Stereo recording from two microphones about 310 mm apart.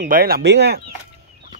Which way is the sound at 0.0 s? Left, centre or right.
Right.